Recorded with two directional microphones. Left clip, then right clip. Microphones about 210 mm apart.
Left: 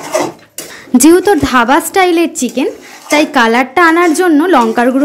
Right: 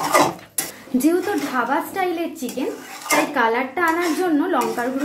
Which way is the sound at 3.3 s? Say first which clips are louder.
Left 11 dB; 50° left (ahead or behind).